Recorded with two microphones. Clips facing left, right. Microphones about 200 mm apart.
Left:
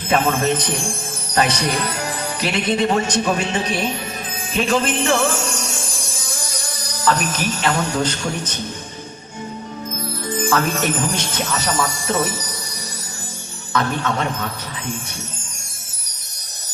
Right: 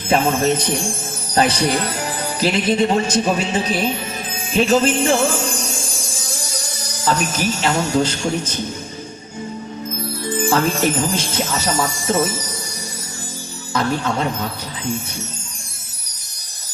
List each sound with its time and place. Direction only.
0.1 s a man's voice: 30° right (ahead or behind)
4.5 s music: 30° right (ahead or behind)
6.7 s speech: 25° right (ahead or behind)
10.4 s speech: 30° right (ahead or behind)
13.7 s a man's voice: 30° right (ahead or behind)